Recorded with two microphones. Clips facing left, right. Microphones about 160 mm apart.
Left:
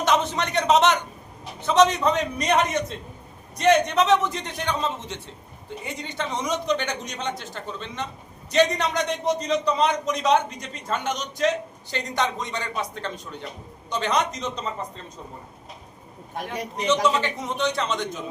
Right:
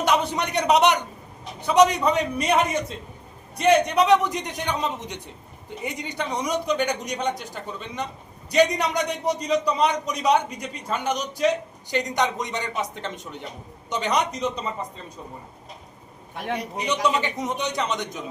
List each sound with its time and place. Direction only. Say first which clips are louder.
0.0 s a man's voice: even; 10° right (ahead or behind)
16.3 s a man's voice: right 2 dB; 45° left (ahead or behind)
16.8 s a man's voice: left 3 dB; 15° right (ahead or behind)